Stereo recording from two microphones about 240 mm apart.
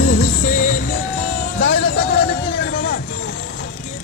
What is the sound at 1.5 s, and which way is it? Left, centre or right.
Music, left.